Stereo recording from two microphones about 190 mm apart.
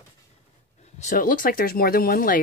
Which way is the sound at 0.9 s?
45° left (ahead or behind).